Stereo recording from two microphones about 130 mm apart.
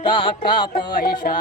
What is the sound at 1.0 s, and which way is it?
Music, 90° left.